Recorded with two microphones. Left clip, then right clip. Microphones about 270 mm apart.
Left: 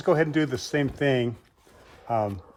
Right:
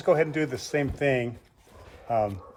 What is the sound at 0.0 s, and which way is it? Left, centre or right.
Speech, left.